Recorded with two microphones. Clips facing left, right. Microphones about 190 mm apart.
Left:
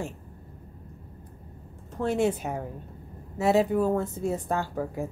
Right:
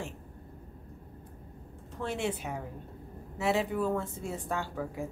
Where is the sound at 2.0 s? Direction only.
40° left (ahead or behind).